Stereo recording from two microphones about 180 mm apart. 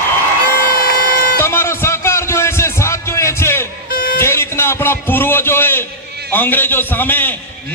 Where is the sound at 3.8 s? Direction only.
55° left (ahead or behind).